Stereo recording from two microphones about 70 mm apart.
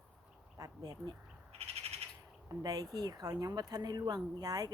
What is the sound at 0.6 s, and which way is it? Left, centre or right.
Speech, right.